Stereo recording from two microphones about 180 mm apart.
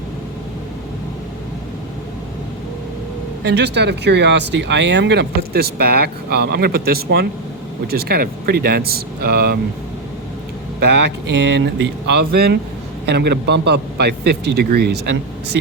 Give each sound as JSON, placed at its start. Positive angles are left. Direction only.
{"t": 3.4, "sound": "speech", "side_deg": -70}
{"t": 10.8, "sound": "speech", "side_deg": -70}